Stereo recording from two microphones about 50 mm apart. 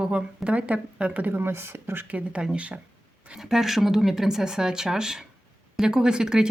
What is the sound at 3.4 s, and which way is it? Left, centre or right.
Speech, centre.